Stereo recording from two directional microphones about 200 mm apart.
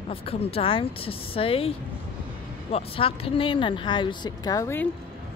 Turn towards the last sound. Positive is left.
turn(degrees=15)  # may be behind; listen again after turning